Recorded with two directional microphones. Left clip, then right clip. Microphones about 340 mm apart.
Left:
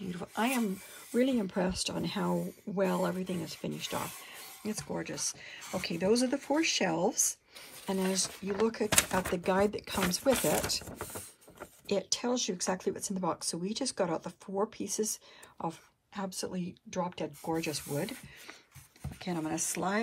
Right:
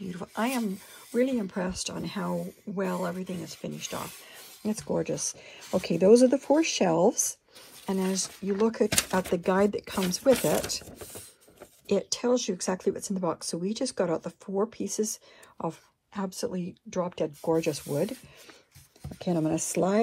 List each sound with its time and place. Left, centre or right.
0.1 s a sound: centre
1.1 s speech: centre
4.9 s speech: centre
7.8 s speech: centre
19.2 s speech: right